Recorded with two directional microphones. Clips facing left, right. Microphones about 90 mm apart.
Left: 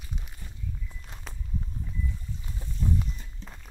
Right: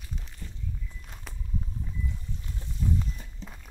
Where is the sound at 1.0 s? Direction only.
Centre (ahead or behind).